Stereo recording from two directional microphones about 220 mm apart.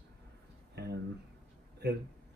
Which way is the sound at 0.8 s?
50° right (ahead or behind).